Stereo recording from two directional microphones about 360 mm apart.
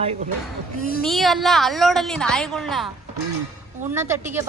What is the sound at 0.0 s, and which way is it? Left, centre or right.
Speech, centre.